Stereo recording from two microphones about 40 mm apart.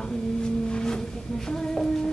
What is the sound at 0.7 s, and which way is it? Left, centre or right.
Music, centre.